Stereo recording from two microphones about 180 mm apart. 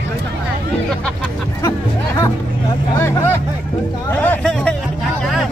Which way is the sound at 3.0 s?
10° left (ahead or behind).